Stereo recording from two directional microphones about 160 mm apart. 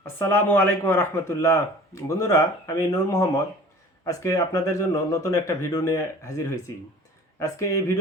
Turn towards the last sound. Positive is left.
turn(degrees=20)  # may be behind; listen again after turning